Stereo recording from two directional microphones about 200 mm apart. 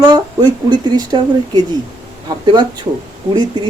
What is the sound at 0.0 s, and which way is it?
Speech, 20° right (ahead or behind).